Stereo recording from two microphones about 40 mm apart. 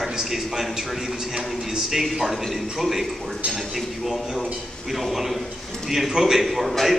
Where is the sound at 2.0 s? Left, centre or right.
Centre.